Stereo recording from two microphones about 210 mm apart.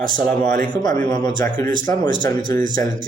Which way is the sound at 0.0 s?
40° right (ahead or behind).